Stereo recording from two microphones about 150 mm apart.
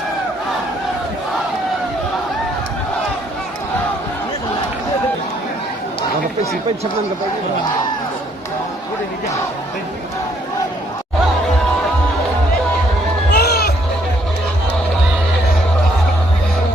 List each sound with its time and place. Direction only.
13.3 s music: 90° left